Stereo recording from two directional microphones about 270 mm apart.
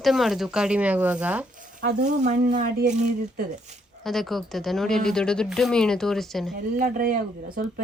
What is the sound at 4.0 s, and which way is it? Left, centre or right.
Speech, centre.